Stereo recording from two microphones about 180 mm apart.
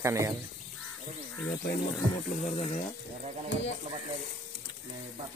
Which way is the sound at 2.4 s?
40° left (ahead or behind).